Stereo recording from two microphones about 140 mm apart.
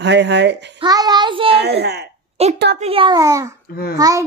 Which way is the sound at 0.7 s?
30° right (ahead or behind).